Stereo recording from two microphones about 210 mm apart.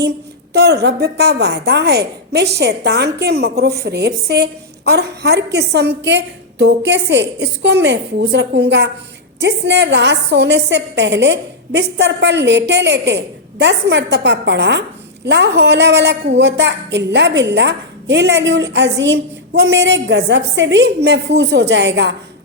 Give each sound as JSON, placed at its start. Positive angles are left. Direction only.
{"t": 0.0, "sound": "a woman's voice", "side_deg": -50}